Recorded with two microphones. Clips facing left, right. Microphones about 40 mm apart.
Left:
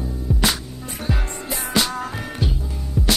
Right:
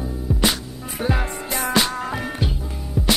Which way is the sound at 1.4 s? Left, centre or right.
Right.